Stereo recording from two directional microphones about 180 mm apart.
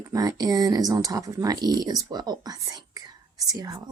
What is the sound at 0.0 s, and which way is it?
Speech, 20° right (ahead or behind).